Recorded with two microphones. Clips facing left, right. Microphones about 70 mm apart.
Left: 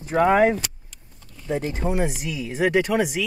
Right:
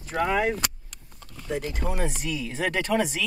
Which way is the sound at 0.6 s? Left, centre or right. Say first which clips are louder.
Right 2 dB; right.